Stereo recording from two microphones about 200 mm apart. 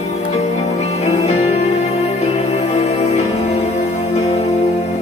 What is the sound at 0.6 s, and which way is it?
Music, 35° left (ahead or behind).